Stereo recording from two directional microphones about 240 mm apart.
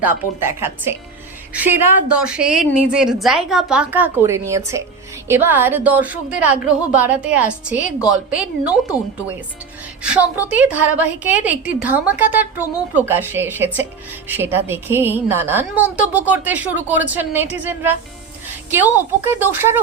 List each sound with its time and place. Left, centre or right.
0.0 s a woman's voice: centre
10.0 s a woman's voice: centre